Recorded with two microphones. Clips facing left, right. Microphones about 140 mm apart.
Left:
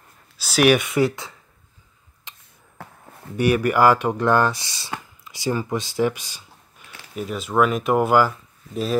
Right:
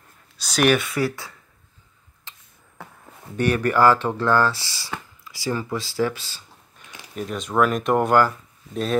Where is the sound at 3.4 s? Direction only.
10° left (ahead or behind).